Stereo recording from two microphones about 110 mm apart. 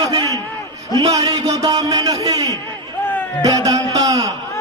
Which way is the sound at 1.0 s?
35° right (ahead or behind).